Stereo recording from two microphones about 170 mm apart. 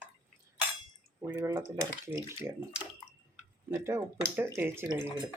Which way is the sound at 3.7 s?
15° right (ahead or behind).